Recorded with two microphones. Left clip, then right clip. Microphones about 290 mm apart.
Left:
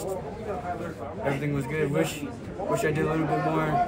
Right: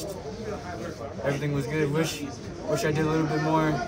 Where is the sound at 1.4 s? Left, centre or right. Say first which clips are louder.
Right 1 dB; centre.